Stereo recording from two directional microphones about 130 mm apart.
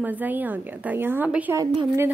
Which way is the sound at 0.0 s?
15° right (ahead or behind).